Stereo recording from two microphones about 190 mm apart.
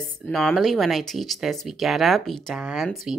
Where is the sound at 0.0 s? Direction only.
Centre (ahead or behind).